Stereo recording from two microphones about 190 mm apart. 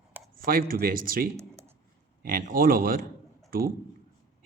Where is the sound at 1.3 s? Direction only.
15° right (ahead or behind).